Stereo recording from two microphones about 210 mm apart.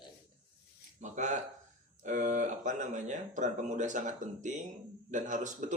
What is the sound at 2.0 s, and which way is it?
Speech, 35° right (ahead or behind).